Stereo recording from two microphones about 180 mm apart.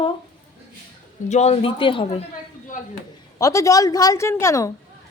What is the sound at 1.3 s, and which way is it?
Speech, 35° left (ahead or behind).